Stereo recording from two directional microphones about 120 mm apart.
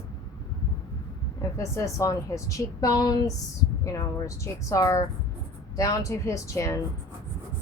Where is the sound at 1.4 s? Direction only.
25° left (ahead or behind).